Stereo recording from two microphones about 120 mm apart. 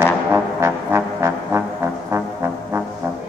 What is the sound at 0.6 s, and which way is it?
Brass instrument, 20° right (ahead or behind).